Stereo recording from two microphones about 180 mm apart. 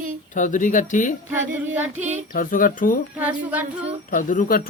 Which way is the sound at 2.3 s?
50° left (ahead or behind).